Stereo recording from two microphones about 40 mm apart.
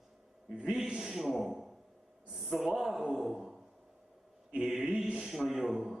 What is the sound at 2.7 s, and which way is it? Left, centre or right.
Speech, centre.